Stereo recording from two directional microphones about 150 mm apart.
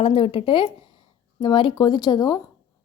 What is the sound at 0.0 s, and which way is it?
A woman's voice, 35° left (ahead or behind).